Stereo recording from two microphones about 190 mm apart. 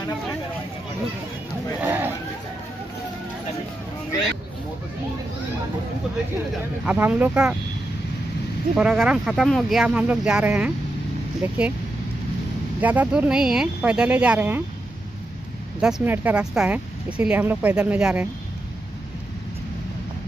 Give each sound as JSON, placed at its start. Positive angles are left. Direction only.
{"t": 1.8, "sound": "speech", "side_deg": -10}
{"t": 6.9, "sound": "speech", "side_deg": -10}
{"t": 8.7, "sound": "speech", "side_deg": -5}
{"t": 12.8, "sound": "speech", "side_deg": -10}
{"t": 15.8, "sound": "speech", "side_deg": -5}